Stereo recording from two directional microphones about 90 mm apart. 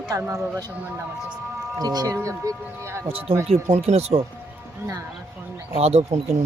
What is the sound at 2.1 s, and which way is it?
Speech, 35° right (ahead or behind).